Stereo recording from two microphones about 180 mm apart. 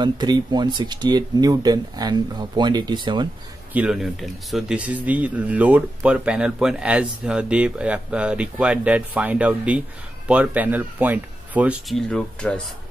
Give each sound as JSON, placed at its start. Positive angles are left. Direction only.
{"t": 0.0, "sound": "speech", "side_deg": -25}
{"t": 3.7, "sound": "speech", "side_deg": -5}
{"t": 12.1, "sound": "speech", "side_deg": 5}